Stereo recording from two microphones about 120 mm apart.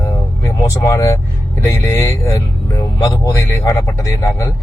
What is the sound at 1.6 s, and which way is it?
A man's voice, 25° left (ahead or behind).